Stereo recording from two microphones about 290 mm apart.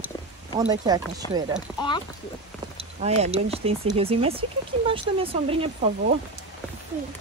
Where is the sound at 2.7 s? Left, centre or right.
Right.